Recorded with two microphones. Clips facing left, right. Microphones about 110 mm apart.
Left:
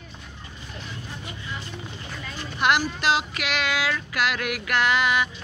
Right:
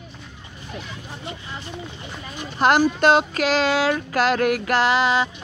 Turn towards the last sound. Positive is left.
turn(degrees=-30)  # may be behind; listen again after turning